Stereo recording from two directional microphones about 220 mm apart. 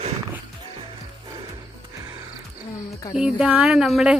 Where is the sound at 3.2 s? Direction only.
5° right (ahead or behind).